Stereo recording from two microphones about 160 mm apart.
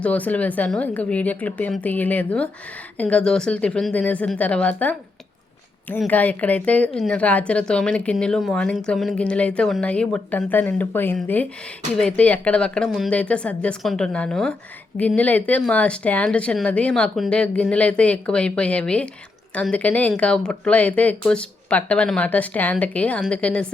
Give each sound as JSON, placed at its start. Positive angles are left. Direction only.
{"t": 0.0, "sound": "speech", "side_deg": 10}
{"t": 6.1, "sound": "speech", "side_deg": 10}